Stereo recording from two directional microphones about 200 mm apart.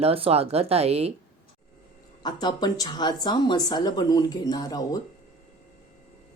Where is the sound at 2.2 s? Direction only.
20° left (ahead or behind).